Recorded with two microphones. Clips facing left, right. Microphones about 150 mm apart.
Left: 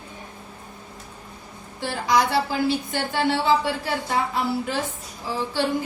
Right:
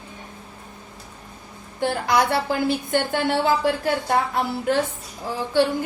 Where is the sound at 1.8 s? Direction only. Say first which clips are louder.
Right 1 dB; 55° right (ahead or behind).